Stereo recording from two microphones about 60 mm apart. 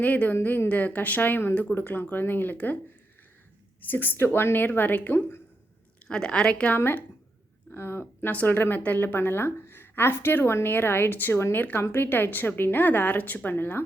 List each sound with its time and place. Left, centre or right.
0.0 s a woman's voice: left
3.8 s a woman's voice: left
6.1 s a woman's voice: centre
6.7 s a woman's voice: left
8.8 s speech: left
9.1 s a woman's voice: left